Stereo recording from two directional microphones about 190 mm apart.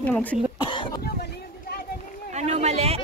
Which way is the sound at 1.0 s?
55° left (ahead or behind).